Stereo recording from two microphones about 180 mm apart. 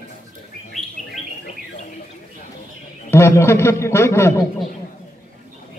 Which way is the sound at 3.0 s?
15° left (ahead or behind).